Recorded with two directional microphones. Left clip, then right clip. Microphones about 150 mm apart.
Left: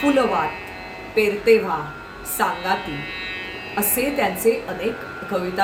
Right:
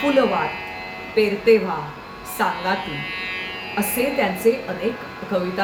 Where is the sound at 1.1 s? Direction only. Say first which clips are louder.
Even; 10° left (ahead or behind).